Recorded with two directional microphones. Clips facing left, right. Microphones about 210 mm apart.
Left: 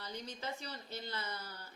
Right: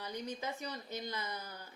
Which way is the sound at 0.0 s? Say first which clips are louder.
Right 3 dB; 15° right (ahead or behind).